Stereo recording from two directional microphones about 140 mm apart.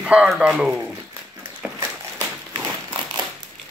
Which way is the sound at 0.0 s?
5° right (ahead or behind).